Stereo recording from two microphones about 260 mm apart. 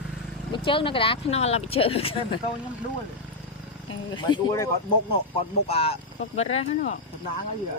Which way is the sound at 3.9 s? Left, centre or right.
Centre.